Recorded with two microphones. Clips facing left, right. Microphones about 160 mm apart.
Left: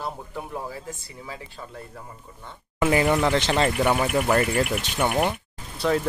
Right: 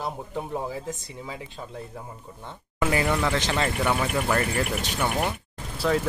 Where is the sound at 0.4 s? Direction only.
20° right (ahead or behind).